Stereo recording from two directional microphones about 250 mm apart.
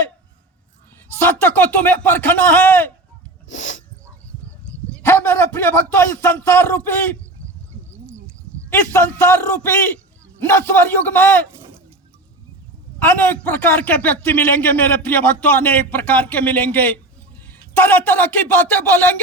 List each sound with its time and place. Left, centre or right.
1.2 s a man's voice: centre
3.5 s dog: left
4.4 s a sound: centre
8.7 s a man's voice: centre
13.0 s a man's voice: centre